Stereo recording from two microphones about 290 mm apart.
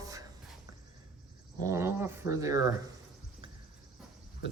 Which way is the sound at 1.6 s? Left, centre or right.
Centre.